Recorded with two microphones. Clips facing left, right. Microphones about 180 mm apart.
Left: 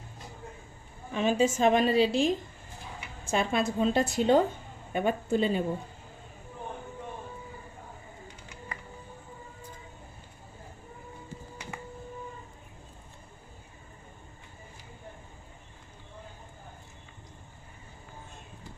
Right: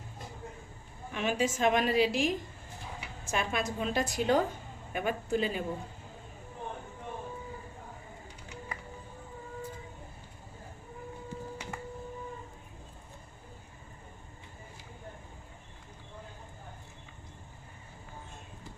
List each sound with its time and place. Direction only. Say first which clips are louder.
1.1 s a woman's voice: left 5 dB; 30° left (ahead or behind)